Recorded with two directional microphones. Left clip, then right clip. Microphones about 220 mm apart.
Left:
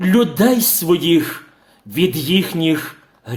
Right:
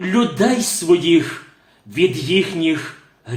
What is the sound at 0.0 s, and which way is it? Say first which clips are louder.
Speech: left 2 dB; 50° left (ahead or behind).